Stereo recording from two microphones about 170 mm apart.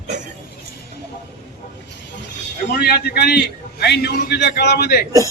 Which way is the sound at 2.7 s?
70° left (ahead or behind).